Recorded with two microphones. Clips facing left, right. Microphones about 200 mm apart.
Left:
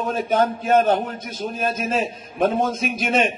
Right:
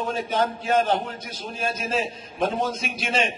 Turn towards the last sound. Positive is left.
turn(degrees=50)  # may be behind; listen again after turning